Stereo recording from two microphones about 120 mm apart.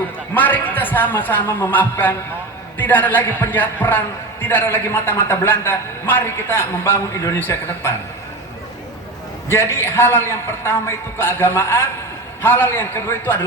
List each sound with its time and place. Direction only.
0.3 s a man's voice: 15° left (ahead or behind)
9.5 s a man's voice: 20° left (ahead or behind)